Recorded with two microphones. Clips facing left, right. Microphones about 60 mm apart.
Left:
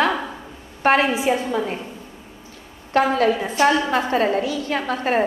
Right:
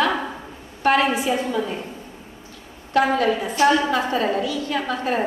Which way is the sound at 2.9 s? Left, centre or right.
Left.